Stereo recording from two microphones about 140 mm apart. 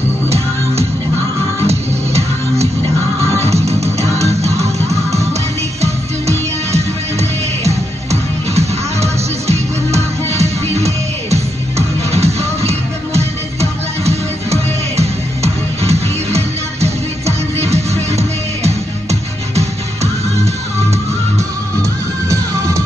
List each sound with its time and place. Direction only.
1.6 s music: 50° right (ahead or behind)
3.3 s music: 50° right (ahead or behind)